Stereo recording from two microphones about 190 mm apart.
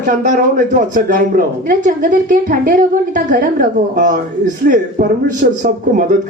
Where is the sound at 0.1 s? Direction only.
45° right (ahead or behind).